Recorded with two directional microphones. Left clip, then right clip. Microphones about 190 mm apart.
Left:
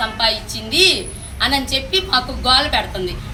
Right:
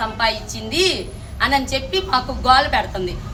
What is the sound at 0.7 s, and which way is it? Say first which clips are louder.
Speech: left 5 dB; 5° right (ahead or behind).